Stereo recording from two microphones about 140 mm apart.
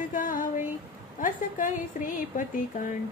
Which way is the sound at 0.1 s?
75° left (ahead or behind).